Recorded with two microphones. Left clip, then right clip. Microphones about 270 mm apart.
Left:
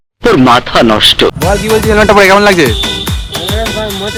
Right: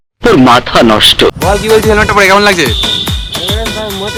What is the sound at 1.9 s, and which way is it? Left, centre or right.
Music, centre.